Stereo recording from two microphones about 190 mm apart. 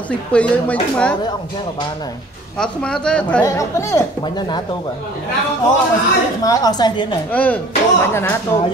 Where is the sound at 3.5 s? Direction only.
15° left (ahead or behind).